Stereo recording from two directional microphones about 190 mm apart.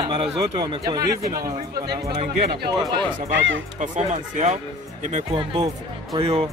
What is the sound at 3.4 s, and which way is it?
Speech, 85° right.